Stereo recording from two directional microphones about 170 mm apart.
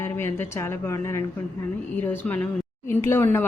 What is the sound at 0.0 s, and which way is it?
A woman's voice, 15° left (ahead or behind).